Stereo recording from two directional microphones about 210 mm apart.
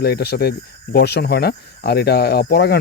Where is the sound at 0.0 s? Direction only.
50° left (ahead or behind).